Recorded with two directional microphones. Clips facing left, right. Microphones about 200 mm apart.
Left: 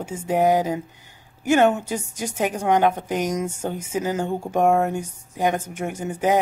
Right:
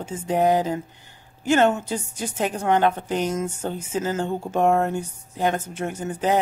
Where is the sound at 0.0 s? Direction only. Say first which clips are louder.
Left 1 dB; 10° left (ahead or behind).